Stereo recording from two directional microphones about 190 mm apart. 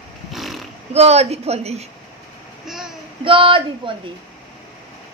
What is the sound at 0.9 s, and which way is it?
Speech, 35° right (ahead or behind).